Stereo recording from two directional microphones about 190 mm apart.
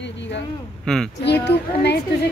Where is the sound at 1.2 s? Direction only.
60° left (ahead or behind).